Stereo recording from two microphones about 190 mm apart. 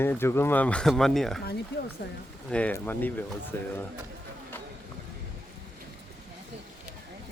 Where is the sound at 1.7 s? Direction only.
60° left (ahead or behind).